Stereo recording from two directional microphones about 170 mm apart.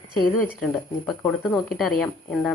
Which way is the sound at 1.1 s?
10° left (ahead or behind).